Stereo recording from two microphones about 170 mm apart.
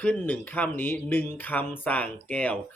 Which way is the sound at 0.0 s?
10° left (ahead or behind).